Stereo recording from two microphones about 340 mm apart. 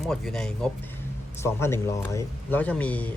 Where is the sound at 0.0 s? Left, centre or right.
Centre.